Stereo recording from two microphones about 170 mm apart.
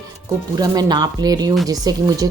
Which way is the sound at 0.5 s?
20° right (ahead or behind).